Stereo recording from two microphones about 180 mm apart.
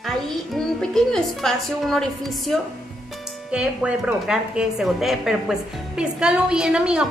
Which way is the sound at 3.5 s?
5° right (ahead or behind).